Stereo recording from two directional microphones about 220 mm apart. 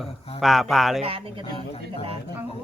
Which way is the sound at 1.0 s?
25° right (ahead or behind).